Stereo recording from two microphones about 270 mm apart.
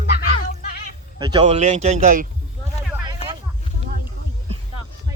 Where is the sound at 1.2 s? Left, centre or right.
Centre.